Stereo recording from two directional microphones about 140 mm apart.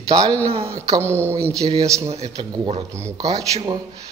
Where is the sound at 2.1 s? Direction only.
45° right (ahead or behind).